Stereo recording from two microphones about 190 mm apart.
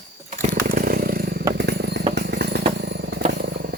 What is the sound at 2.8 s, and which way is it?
Vehicle, 60° right (ahead or behind).